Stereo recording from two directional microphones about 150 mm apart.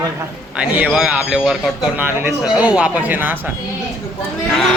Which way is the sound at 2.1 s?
15° right (ahead or behind).